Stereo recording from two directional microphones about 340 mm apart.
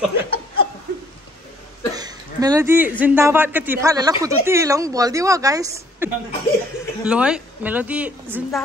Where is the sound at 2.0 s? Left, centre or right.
Centre.